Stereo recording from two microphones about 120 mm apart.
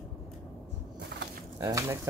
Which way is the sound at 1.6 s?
30° right (ahead or behind).